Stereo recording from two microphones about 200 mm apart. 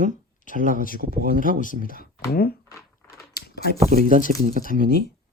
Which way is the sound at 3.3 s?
55° left (ahead or behind).